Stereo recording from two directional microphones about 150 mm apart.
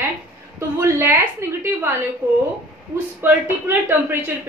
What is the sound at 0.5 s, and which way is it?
A woman's voice, 15° right (ahead or behind).